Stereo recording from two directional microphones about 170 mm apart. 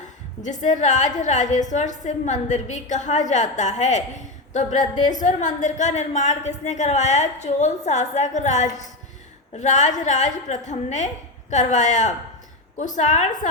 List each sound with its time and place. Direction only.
0.4 s a woman's voice: 45° left (ahead or behind)